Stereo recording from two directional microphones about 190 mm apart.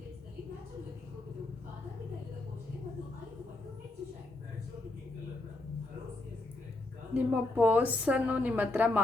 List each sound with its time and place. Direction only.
7.1 s a woman's voice: 10° right (ahead or behind)